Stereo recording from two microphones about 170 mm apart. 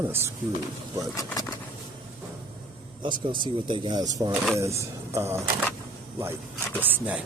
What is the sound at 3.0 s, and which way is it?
Speech, 30° right (ahead or behind).